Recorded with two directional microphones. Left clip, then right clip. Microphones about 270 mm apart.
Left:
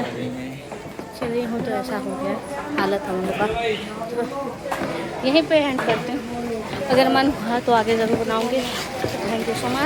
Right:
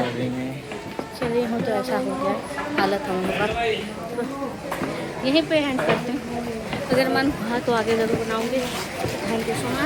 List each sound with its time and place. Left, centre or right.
2.7 s speech: centre
5.2 s a woman's voice: centre
6.9 s a woman's voice: centre